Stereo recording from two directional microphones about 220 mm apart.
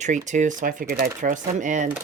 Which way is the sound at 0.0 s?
35° right (ahead or behind).